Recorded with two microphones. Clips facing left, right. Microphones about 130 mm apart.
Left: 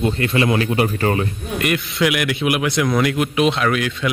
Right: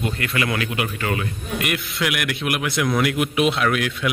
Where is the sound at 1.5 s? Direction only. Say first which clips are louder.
Left 5 dB; 5° right (ahead or behind).